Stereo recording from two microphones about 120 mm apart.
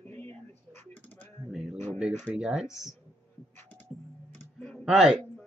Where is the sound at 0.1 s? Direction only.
15° left (ahead or behind).